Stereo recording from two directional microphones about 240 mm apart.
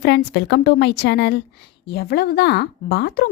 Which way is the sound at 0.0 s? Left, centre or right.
Left.